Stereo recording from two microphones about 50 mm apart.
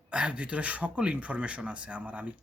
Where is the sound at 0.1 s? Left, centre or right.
Right.